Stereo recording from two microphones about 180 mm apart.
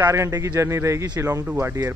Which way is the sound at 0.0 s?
15° right (ahead or behind).